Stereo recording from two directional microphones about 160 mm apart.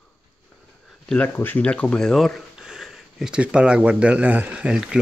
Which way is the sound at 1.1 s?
10° left (ahead or behind).